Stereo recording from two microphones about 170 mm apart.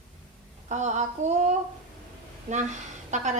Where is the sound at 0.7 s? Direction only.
45° right (ahead or behind).